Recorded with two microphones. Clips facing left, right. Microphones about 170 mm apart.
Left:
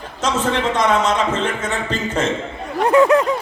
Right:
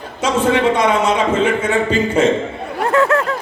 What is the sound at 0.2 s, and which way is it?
A man's voice, 10° right (ahead or behind).